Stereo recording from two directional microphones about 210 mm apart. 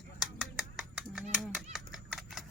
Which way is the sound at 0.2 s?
Centre (ahead or behind).